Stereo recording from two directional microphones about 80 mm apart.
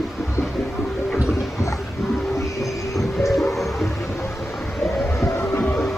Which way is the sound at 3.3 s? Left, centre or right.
Centre.